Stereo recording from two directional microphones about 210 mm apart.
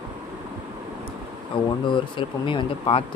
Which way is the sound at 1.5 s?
25° left (ahead or behind).